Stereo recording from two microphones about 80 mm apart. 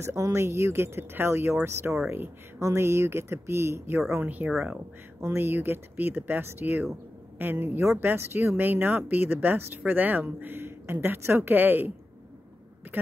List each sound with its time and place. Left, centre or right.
0.0 s speech: right; by 4.7 s centre
5.2 s speech: right